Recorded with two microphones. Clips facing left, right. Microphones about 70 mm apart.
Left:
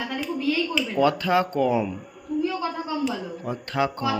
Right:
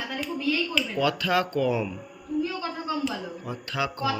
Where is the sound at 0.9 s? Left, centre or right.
Left.